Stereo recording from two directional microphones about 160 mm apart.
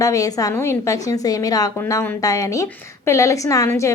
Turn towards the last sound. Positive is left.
turn(degrees=20)  # may be behind; listen again after turning